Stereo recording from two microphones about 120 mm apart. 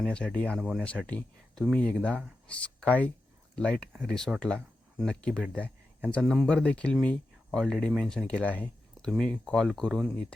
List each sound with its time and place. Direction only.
0.0 s speech: 10° left (ahead or behind)